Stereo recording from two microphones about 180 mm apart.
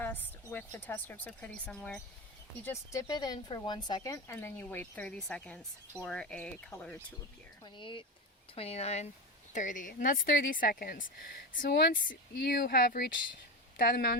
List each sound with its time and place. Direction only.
0.0 s speech: 10° left (ahead or behind)
2.6 s speech: 20° left (ahead or behind)
7.6 s speech: 30° left (ahead or behind); by 14.2 s 60° left (ahead or behind)